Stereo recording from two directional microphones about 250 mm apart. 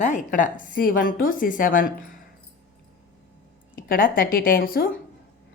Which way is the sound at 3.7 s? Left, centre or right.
Left.